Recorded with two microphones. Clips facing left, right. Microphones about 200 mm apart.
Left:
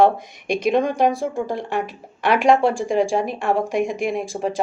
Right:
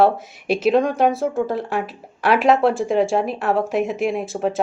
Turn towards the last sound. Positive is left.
turn(degrees=-5)  # may be behind; listen again after turning